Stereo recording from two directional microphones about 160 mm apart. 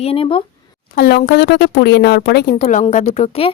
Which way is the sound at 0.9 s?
70° left (ahead or behind).